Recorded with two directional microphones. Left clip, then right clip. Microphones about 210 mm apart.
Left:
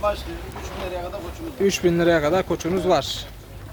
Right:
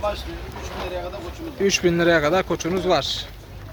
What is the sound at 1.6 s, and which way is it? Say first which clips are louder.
Speech: even; 10° left (ahead or behind).